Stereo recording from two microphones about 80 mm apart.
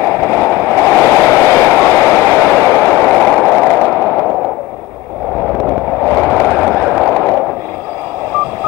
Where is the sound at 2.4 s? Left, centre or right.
Centre.